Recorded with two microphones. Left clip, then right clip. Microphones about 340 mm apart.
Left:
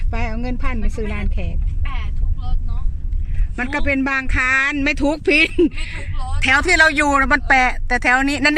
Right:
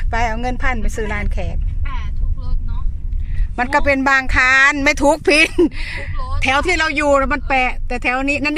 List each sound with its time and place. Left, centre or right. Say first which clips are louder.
0.4 s speech: right 6 dB; centre
3.6 s speech: right 5 dB; centre